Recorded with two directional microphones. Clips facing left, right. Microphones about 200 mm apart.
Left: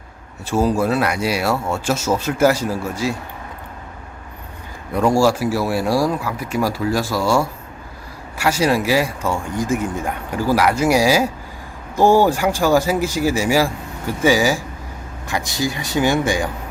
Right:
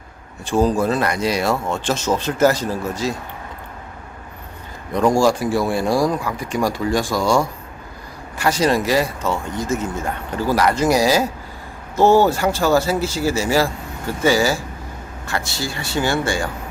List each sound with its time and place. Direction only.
0.4 s speech: 5° left (ahead or behind)
4.9 s speech: 5° left (ahead or behind)